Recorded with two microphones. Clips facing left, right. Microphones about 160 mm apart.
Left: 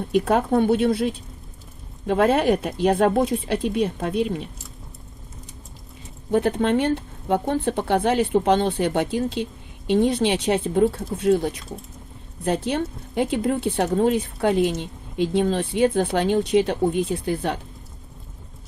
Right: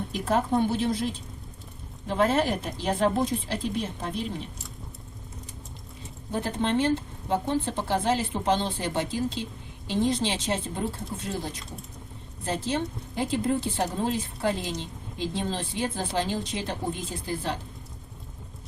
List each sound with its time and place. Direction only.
0.1 s speech: 60° left (ahead or behind)
6.3 s speech: 60° left (ahead or behind)